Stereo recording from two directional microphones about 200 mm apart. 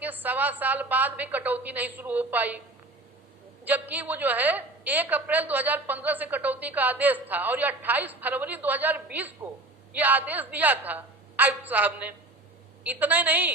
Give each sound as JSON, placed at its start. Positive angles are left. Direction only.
{"t": 0.0, "sound": "a woman's voice", "side_deg": -10}
{"t": 3.6, "sound": "a woman's voice", "side_deg": -10}